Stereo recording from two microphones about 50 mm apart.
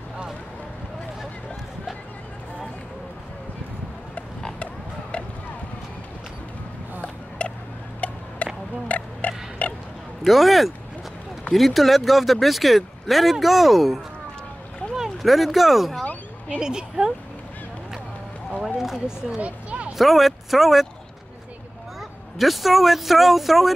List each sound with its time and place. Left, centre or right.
7.0 s a sound: left
8.0 s tick-tock: left
8.4 s a sound: left
10.2 s speech: centre
16.5 s speech: centre
18.8 s speech: centre
19.3 s a sound: right
20.0 s speech: centre
22.4 s speech: centre